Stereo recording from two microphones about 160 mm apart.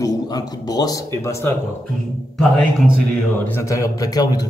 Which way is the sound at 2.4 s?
5° left (ahead or behind).